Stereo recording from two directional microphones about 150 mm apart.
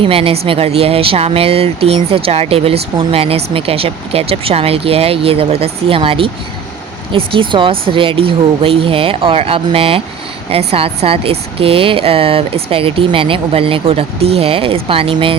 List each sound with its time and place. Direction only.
0.0 s speech: 40° right (ahead or behind)